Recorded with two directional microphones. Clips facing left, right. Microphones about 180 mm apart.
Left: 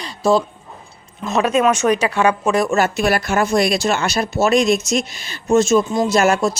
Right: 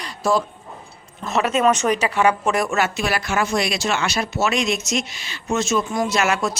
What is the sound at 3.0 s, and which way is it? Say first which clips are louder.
Speech: left 5 dB; 45° left (ahead or behind).